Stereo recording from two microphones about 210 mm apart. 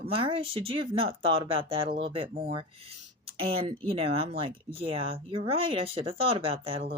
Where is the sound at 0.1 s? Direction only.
25° right (ahead or behind).